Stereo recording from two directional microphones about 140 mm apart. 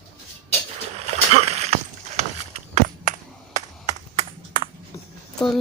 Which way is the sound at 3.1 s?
70° right (ahead or behind).